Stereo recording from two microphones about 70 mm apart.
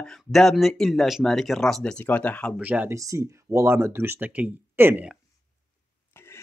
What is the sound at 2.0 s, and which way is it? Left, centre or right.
Speech, left.